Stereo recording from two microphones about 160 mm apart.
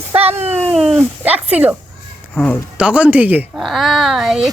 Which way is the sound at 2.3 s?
10° left (ahead or behind).